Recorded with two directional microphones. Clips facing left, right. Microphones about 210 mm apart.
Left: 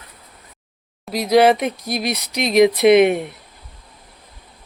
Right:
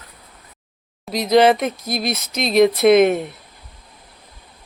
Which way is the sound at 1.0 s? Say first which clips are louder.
Even; 10° left (ahead or behind).